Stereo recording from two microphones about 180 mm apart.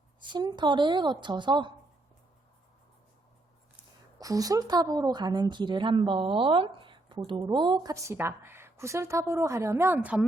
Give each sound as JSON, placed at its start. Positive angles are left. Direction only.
{"t": 0.3, "sound": "a woman's voice", "side_deg": -25}
{"t": 4.2, "sound": "a woman's voice", "side_deg": -20}